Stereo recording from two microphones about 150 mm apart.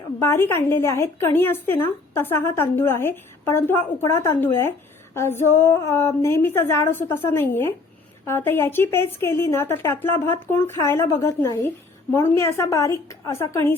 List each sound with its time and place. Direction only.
0.2 s a woman's voice: 15° left (ahead or behind)